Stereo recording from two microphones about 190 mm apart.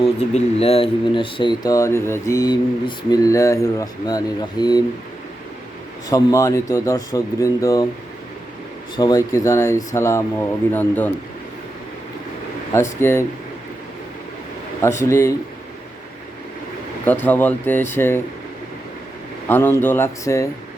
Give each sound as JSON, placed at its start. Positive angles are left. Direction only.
{"t": 0.2, "sound": "speech", "side_deg": 35}
{"t": 6.1, "sound": "speech", "side_deg": 20}
{"t": 9.0, "sound": "speech", "side_deg": 20}
{"t": 12.7, "sound": "speech", "side_deg": 15}
{"t": 14.8, "sound": "speech", "side_deg": 15}
{"t": 17.1, "sound": "speech", "side_deg": 10}
{"t": 19.5, "sound": "speech", "side_deg": 10}